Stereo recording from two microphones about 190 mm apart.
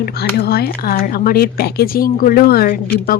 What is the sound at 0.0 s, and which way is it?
Speech, 55° left (ahead or behind).